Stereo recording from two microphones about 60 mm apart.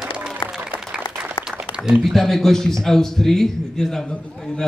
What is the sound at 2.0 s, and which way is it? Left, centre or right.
Speech, centre.